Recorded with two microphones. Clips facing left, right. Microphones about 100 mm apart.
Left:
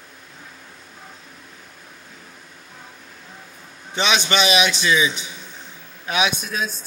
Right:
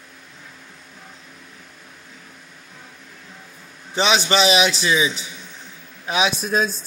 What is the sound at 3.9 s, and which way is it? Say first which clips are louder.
A man's voice: right 2 dB; 35° right (ahead or behind).